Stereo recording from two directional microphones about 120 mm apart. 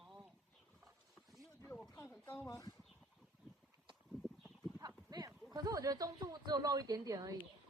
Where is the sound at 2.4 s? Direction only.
25° left (ahead or behind).